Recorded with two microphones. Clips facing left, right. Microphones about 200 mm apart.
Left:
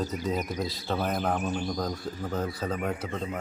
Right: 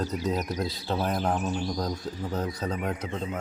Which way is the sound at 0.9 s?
55° left (ahead or behind).